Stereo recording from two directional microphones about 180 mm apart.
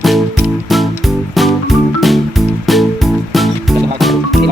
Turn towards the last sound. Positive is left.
turn(degrees=0)  # may be behind; listen again after turning